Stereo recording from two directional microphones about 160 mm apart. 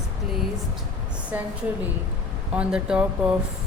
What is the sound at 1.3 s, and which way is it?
Speech, 10° right (ahead or behind).